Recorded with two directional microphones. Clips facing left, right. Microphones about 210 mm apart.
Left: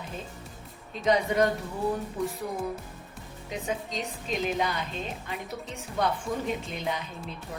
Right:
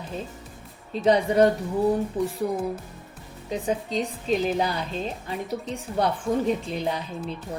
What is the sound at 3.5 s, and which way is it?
Speech, 35° right (ahead or behind).